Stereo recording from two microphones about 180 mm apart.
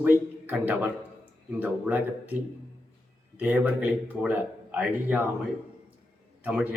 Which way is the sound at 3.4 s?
10° right (ahead or behind).